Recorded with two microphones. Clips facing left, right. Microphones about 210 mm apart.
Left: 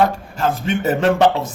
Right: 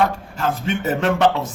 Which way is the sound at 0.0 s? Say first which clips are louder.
Left 3 dB; 35° left (ahead or behind).